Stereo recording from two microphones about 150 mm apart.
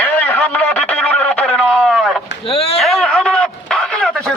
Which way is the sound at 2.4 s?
40° left (ahead or behind).